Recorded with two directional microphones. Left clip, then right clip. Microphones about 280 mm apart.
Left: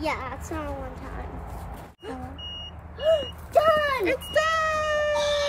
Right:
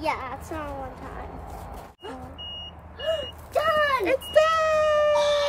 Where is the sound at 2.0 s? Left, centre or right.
Centre.